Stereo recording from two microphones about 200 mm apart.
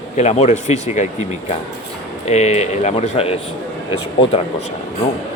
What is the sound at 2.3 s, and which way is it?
Speech, 35° left (ahead or behind).